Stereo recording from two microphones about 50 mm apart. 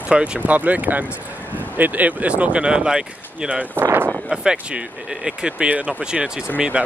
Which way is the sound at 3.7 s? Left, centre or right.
Right.